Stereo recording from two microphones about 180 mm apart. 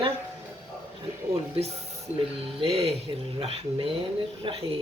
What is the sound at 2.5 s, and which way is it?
Speech, 35° right (ahead or behind).